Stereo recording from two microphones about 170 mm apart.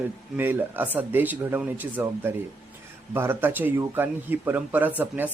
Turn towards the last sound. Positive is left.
turn(degrees=-10)  # may be behind; listen again after turning